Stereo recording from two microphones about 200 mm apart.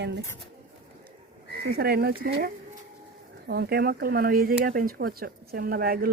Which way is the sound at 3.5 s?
50° right (ahead or behind).